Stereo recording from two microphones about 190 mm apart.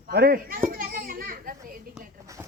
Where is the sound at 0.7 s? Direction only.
50° right (ahead or behind).